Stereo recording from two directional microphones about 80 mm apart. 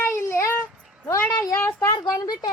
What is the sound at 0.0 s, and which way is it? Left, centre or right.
Child singing, left.